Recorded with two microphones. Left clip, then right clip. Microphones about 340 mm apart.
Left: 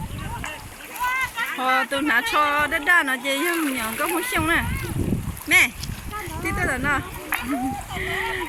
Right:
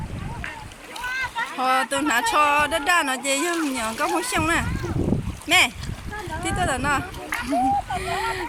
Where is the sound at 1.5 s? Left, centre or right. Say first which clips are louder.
Even; centre.